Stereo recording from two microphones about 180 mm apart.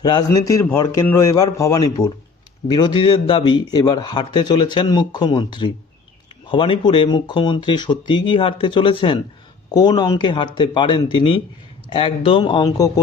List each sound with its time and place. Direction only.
0.0 s a man's voice: 20° left (ahead or behind)